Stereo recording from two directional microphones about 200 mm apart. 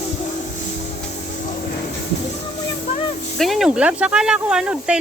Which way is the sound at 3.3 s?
Centre (ahead or behind).